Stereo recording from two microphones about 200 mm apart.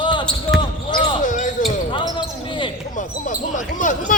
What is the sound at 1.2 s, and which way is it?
Basketball bounce, 40° left (ahead or behind).